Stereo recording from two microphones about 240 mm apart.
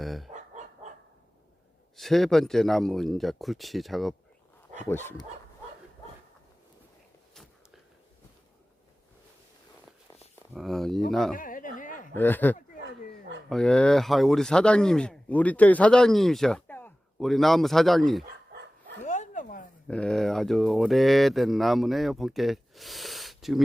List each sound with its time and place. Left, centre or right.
0.0 s chicken: centre
0.6 s dog: right
2.0 s speech: centre
10.5 s speech: centre
11.3 s a sound: left
12.1 s speech: centre
19.0 s a sound: left
19.9 s speech: centre